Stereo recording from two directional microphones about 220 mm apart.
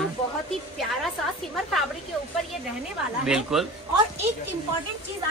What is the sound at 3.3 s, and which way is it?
Speech, centre (ahead or behind).